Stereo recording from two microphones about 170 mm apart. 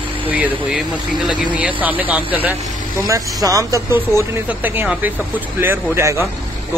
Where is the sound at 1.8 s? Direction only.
10° right (ahead or behind).